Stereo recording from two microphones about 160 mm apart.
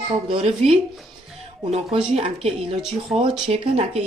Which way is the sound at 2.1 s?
40° right (ahead or behind).